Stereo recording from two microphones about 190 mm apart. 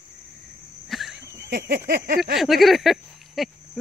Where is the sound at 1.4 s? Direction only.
50° right (ahead or behind).